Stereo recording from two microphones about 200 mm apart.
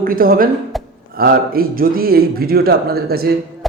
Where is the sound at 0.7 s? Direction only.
Centre (ahead or behind).